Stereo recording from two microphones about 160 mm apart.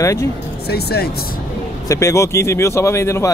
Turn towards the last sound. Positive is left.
turn(degrees=15)  # may be behind; listen again after turning